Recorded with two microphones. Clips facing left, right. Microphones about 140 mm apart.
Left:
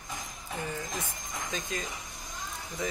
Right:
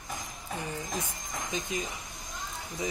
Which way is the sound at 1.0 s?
15° right (ahead or behind).